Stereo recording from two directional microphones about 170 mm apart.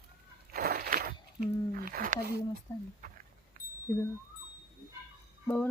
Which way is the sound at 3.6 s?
50° right (ahead or behind).